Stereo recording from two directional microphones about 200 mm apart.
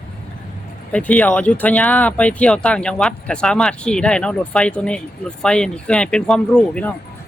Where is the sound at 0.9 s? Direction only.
5° left (ahead or behind).